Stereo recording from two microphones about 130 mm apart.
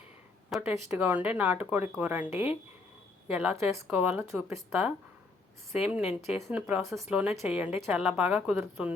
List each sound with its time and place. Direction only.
0.6 s a woman's voice: 10° right (ahead or behind)